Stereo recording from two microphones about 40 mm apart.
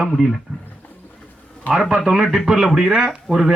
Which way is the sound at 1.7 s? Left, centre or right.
Left.